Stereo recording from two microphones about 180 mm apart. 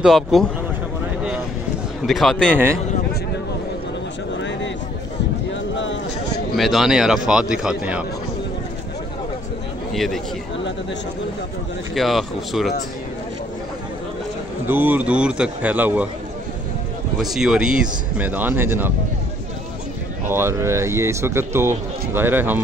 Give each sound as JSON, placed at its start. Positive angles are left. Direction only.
{"t": 0.0, "sound": "a man's voice", "side_deg": 0}
{"t": 2.0, "sound": "a man's voice", "side_deg": 0}
{"t": 4.4, "sound": "a sound", "side_deg": 85}
{"t": 5.8, "sound": "a sound", "side_deg": 90}
{"t": 6.5, "sound": "a man's voice", "side_deg": 0}
{"t": 9.9, "sound": "a man's voice", "side_deg": 0}
{"t": 11.9, "sound": "a man's voice", "side_deg": 0}
{"t": 14.7, "sound": "speech", "side_deg": -10}
{"t": 17.2, "sound": "speech", "side_deg": 0}
{"t": 20.2, "sound": "speech", "side_deg": -15}